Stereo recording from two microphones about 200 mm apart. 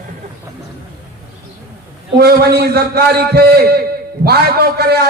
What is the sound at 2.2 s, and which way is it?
A man's voice, 50° right (ahead or behind).